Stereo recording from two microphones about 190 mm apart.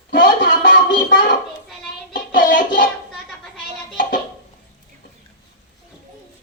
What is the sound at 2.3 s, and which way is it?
Music, 45° left (ahead or behind).